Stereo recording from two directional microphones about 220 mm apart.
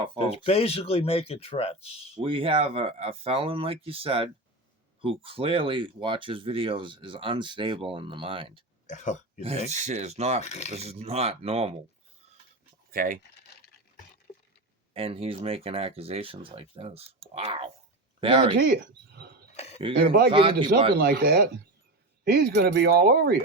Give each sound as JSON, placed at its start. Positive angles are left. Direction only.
{"t": 0.3, "sound": "speech", "side_deg": 25}
{"t": 2.2, "sound": "speech", "side_deg": -25}
{"t": 8.9, "sound": "speech", "side_deg": 35}
{"t": 9.4, "sound": "speech", "side_deg": -30}
{"t": 10.4, "sound": "speech", "side_deg": 30}
{"t": 10.7, "sound": "speech", "side_deg": -30}
{"t": 12.9, "sound": "speech", "side_deg": -40}
{"t": 14.3, "sound": "a sound", "side_deg": 30}
{"t": 14.9, "sound": "speech", "side_deg": -25}
{"t": 18.5, "sound": "speech", "side_deg": -50}
{"t": 19.5, "sound": "a sound", "side_deg": 30}
{"t": 20.0, "sound": "speech", "side_deg": -45}
{"t": 20.3, "sound": "speech", "side_deg": -25}
{"t": 20.9, "sound": "speech", "side_deg": -45}